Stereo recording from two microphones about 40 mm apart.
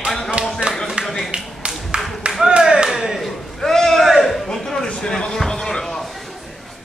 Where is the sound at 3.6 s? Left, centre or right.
Centre.